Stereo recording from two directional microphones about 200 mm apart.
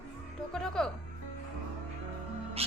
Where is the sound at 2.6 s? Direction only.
30° right (ahead or behind).